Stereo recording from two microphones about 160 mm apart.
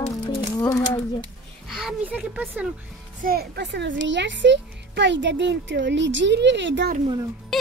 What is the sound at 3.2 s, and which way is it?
A child's voice, 75° right (ahead or behind).